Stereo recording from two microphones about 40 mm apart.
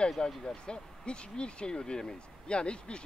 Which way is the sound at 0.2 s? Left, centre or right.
Left.